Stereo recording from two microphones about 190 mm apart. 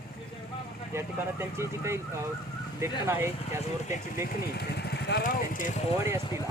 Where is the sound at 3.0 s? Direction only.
15° right (ahead or behind).